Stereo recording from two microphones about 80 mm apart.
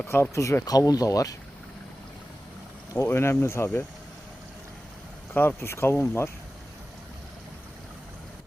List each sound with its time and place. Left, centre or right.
0.0 s speech: left
3.1 s speech: left
5.3 s speech: left